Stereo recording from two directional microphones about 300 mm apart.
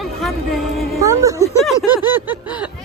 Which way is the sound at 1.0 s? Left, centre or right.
Centre.